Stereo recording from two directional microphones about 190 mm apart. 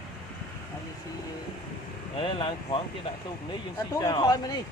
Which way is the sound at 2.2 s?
25° left (ahead or behind).